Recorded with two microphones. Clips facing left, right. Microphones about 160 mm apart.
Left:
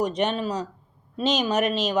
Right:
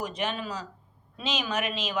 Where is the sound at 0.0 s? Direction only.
40° left (ahead or behind).